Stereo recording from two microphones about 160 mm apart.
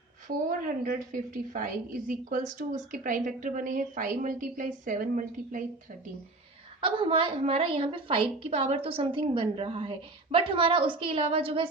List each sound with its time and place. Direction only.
0.3 s a woman's voice: 55° right (ahead or behind)
6.8 s a woman's voice: 30° right (ahead or behind)